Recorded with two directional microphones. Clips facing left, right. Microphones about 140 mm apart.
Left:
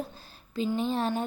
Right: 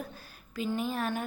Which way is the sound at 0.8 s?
30° left (ahead or behind).